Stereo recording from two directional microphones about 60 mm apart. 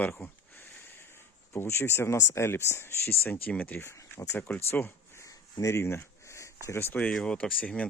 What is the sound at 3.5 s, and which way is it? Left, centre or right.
Speech, left.